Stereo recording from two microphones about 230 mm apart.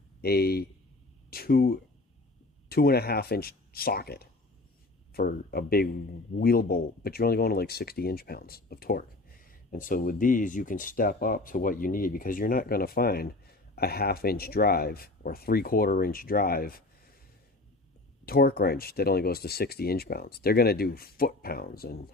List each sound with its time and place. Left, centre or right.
0.2 s speech: left
18.3 s speech: left